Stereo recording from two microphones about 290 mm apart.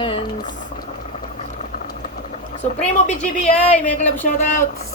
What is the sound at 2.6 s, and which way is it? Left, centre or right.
Speech, centre.